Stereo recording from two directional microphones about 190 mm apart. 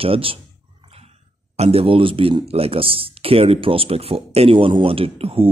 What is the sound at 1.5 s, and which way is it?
Speech, 30° right (ahead or behind).